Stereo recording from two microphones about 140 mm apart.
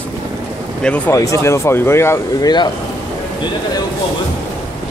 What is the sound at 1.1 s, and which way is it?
Speech, 20° left (ahead or behind).